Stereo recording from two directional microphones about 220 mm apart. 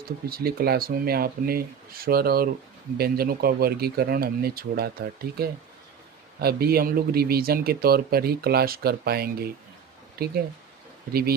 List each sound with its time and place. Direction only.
0.3 s speech: 45° right (ahead or behind)